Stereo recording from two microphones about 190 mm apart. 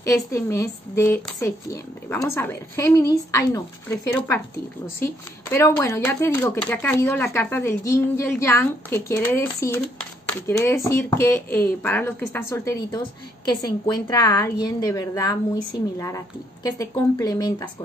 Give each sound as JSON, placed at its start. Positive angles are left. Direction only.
{"t": 0.0, "sound": "speech", "side_deg": 15}
{"t": 16.6, "sound": "speech", "side_deg": 20}